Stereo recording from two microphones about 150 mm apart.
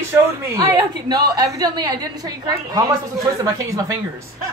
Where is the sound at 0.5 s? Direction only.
25° right (ahead or behind).